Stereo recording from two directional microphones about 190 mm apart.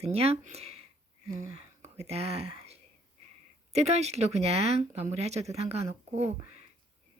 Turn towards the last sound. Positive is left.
turn(degrees=-35)  # may be behind; listen again after turning